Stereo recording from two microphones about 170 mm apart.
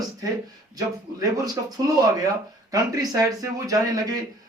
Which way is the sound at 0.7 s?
20° right (ahead or behind).